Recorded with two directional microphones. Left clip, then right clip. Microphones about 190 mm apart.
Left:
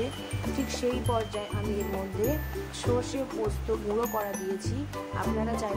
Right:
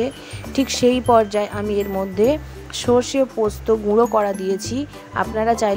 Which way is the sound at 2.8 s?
45° right (ahead or behind).